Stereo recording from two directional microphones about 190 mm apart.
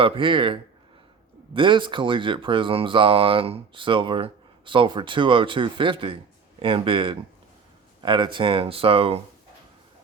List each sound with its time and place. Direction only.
0.0 s speech: 25° right (ahead or behind)